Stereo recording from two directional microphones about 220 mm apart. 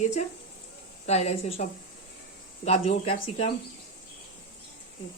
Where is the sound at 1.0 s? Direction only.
30° left (ahead or behind).